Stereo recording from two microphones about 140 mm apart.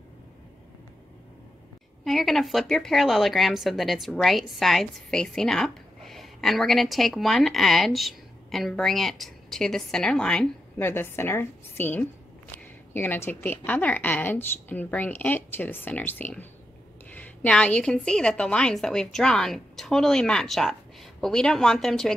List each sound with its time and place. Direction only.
2.0 s speech: centre (ahead or behind)
10.8 s a woman's voice: 15° left (ahead or behind)